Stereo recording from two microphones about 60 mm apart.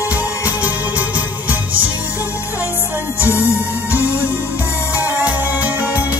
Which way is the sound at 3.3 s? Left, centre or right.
Left.